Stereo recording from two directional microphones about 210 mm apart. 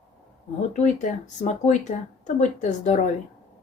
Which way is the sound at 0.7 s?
35° left (ahead or behind).